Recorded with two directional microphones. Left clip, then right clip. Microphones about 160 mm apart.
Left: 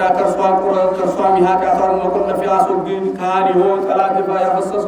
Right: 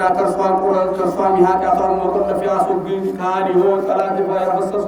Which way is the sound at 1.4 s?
10° left (ahead or behind).